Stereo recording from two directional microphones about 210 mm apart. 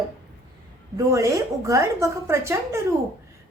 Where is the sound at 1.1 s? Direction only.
15° right (ahead or behind).